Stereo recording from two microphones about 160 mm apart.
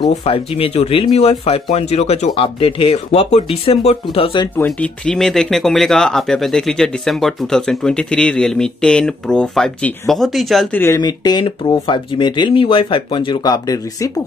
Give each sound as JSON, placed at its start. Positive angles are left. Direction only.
{"t": 0.1, "sound": "speech", "side_deg": 40}
{"t": 4.6, "sound": "speech", "side_deg": 10}
{"t": 11.0, "sound": "speech", "side_deg": 25}